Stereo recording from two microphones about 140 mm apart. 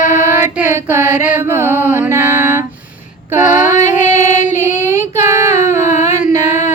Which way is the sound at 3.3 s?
15° right (ahead or behind).